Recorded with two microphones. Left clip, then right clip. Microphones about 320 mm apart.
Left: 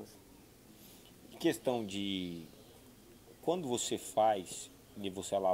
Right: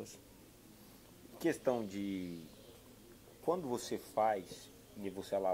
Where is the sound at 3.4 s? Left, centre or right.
Left.